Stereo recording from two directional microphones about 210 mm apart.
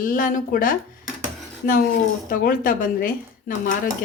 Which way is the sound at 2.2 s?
40° left (ahead or behind).